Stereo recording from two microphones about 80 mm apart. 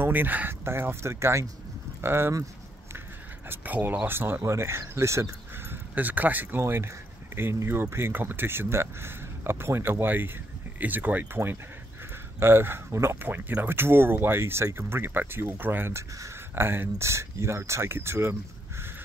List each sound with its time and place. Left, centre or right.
0.0 s speech: right
3.4 s speech: right
5.9 s speech: right